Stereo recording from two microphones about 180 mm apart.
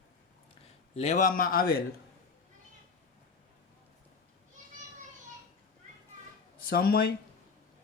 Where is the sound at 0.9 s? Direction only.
40° left (ahead or behind); by 1.8 s 55° left (ahead or behind).